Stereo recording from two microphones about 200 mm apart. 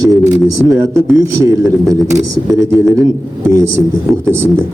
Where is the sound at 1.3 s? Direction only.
15° right (ahead or behind).